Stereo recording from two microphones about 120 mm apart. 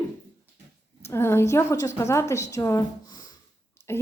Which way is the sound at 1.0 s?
20° left (ahead or behind).